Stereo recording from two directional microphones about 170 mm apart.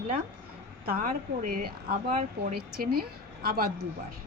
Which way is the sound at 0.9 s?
55° right (ahead or behind).